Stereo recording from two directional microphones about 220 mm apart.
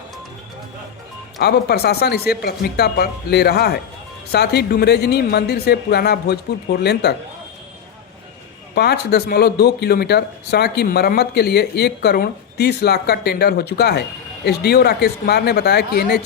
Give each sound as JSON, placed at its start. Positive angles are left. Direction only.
{"t": 1.4, "sound": "speech", "side_deg": 45}
{"t": 8.7, "sound": "speech", "side_deg": 45}